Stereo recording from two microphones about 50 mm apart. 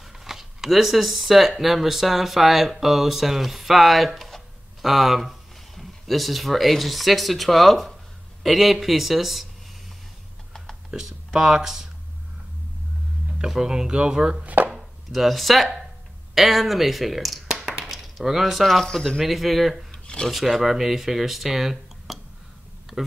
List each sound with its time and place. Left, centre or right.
0.2 s speech: centre
10.9 s speech: centre
13.5 s speech: centre
14.4 s chopping: right
14.7 s speech: centre
17.5 s chop: centre
18.9 s speech: centre
19.9 s a sound: centre
20.2 s speech: centre